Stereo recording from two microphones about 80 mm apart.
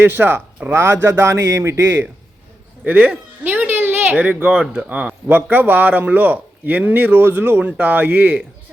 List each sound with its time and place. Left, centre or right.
0.0 s a man's voice: right
3.4 s a sound: right
4.4 s a man's voice: centre